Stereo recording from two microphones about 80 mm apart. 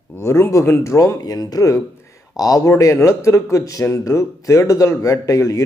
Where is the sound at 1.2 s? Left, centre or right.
Left.